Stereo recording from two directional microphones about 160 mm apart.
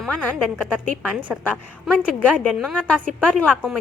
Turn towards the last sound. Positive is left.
turn(degrees=5)  # may be behind; listen again after turning